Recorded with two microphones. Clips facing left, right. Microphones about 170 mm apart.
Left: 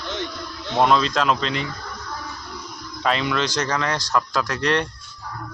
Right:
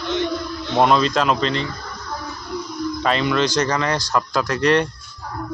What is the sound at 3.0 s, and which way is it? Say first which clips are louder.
Speech: right 2 dB; centre (ahead or behind).